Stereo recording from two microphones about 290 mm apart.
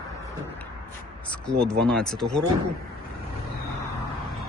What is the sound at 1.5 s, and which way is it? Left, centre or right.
Speech, centre.